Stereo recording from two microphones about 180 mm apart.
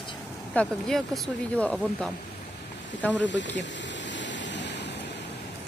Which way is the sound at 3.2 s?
80° left.